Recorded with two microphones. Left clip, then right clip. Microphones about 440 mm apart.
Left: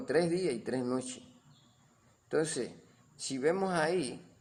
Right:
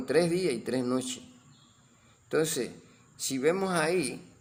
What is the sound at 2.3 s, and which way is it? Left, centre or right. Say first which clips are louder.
A man's voice: right 4 dB; left.